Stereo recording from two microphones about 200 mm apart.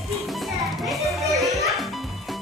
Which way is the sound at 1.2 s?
Centre (ahead or behind).